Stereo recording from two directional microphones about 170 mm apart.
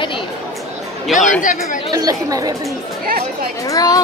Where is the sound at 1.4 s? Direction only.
50° left (ahead or behind).